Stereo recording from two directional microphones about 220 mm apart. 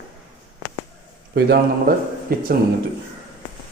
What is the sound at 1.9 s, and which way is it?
Speech, 40° right (ahead or behind).